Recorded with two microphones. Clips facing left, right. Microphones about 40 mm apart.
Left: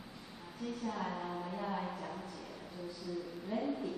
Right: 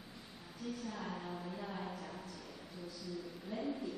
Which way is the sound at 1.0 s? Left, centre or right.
Centre.